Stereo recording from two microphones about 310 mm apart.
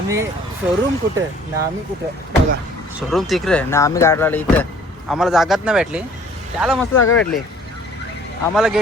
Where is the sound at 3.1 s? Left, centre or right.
Centre.